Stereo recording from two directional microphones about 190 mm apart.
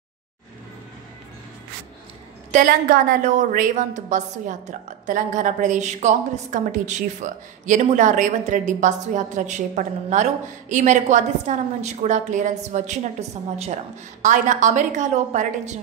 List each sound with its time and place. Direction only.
2.5 s a woman's voice: 45° right (ahead or behind)
14.2 s a woman's voice: 40° right (ahead or behind)